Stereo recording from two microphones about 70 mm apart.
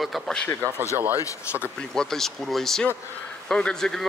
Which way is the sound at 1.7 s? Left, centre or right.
Centre.